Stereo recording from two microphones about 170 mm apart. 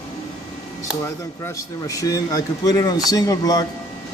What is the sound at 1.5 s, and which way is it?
Speech, 20° left (ahead or behind).